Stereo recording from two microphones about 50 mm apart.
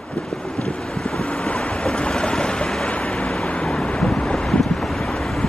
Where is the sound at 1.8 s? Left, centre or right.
Centre.